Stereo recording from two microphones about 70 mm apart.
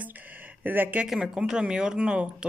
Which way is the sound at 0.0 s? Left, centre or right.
Right.